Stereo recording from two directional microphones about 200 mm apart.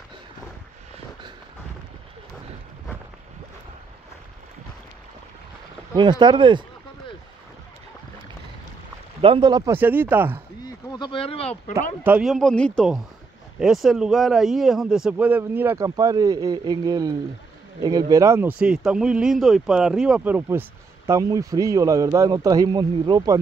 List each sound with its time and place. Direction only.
5.9 s speech: 20° right (ahead or behind)
9.2 s speech: 25° right (ahead or behind)
9.8 s a man's voice: 10° right (ahead or behind)
10.9 s speech: 25° left (ahead or behind)
12.0 s a man's voice: 5° right (ahead or behind)